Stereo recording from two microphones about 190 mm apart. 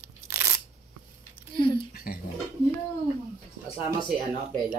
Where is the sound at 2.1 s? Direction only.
50° left (ahead or behind).